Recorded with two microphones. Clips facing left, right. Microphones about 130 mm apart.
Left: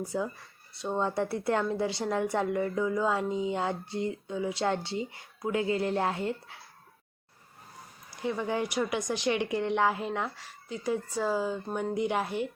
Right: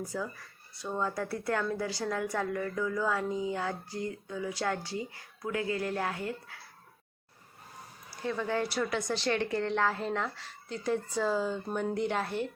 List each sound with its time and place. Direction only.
0.1 s a woman's voice: 25° left (ahead or behind)
8.1 s speech: 15° left (ahead or behind)